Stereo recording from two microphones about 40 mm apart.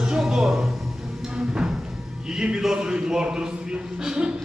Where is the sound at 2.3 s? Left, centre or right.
Centre.